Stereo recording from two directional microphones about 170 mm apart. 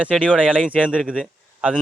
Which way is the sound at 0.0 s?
5° right (ahead or behind).